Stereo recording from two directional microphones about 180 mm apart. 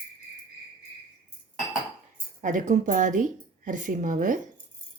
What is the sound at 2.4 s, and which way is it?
A woman's voice, 45° right (ahead or behind).